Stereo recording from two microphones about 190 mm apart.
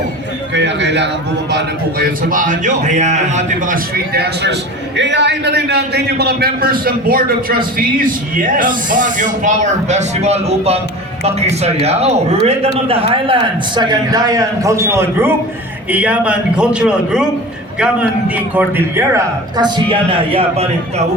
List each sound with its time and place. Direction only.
0.5 s a man's voice: 65° right (ahead or behind)
2.3 s a man's voice: 45° right (ahead or behind)
4.9 s a man's voice: 70° right (ahead or behind); by 17.2 s 5° right (ahead or behind)
18.5 s a man's voice: 15° right (ahead or behind); by 21.1 s 30° right (ahead or behind)